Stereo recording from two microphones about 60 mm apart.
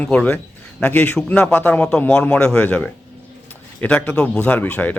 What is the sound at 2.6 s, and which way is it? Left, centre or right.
Speech, left.